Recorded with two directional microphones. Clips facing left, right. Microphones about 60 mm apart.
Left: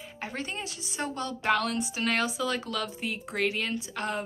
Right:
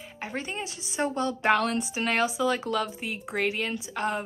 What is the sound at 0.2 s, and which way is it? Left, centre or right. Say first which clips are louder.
Speech: right 2 dB; centre.